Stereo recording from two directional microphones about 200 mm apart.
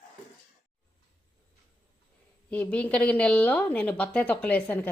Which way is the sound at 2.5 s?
5° left (ahead or behind).